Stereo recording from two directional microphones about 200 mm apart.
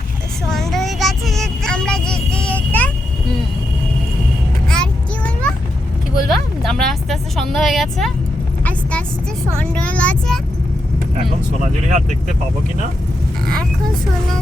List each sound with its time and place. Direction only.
0.4 s vehicle: centre (ahead or behind)
4.7 s a sound: 5° left (ahead or behind)
6.2 s vehicle: centre (ahead or behind)
9.6 s speech: 5° left (ahead or behind)
11.2 s speech: 35° right (ahead or behind)